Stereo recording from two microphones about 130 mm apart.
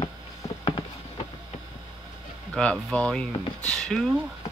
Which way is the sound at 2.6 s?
5° left (ahead or behind).